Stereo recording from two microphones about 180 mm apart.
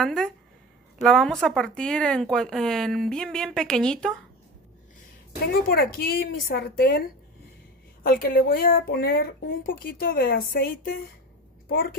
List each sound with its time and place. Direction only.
0.0 s speech: 5° left (ahead or behind)
5.4 s speech: 60° left (ahead or behind)